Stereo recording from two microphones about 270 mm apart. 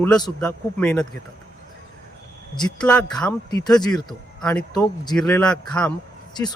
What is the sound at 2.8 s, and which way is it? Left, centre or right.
Speech, centre.